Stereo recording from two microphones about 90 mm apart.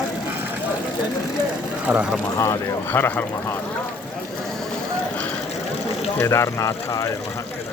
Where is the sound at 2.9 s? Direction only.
20° left (ahead or behind).